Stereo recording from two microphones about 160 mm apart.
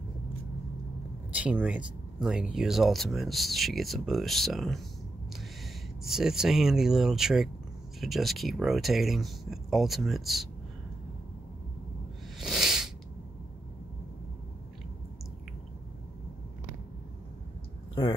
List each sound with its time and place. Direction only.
1.3 s speech: 10° right (ahead or behind)
6.0 s speech: 5° right (ahead or behind)
12.4 s a sound: 5° right (ahead or behind)